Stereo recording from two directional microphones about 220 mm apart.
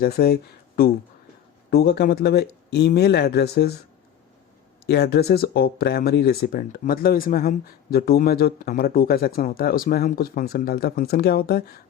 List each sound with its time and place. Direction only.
0.0 s speech: 45° left (ahead or behind)
1.7 s speech: 45° left (ahead or behind)
4.9 s speech: 50° left (ahead or behind)